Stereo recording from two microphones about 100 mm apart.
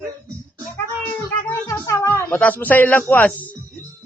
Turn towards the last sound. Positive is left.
turn(degrees=15)  # may be behind; listen again after turning